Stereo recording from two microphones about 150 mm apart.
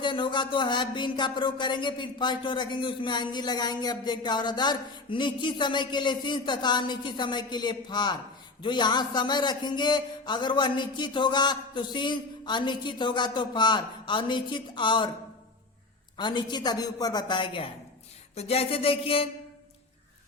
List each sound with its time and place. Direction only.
0.0 s speech: 30° left (ahead or behind)
16.1 s a man's voice: 30° left (ahead or behind)
18.3 s speech: 45° left (ahead or behind)